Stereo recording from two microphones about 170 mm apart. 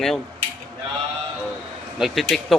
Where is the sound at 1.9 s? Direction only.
Centre (ahead or behind).